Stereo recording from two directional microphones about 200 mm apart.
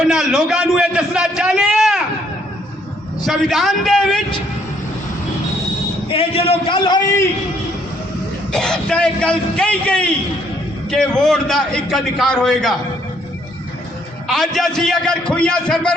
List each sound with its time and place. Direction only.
0.1 s a man's voice: centre (ahead or behind)
3.2 s a man's voice: centre (ahead or behind)
6.1 s a man's voice: 30° left (ahead or behind)
8.5 s a man's voice: 5° left (ahead or behind)
14.3 s a man's voice: centre (ahead or behind)